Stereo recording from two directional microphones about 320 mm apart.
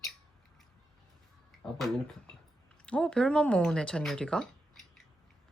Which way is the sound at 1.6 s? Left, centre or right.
Centre.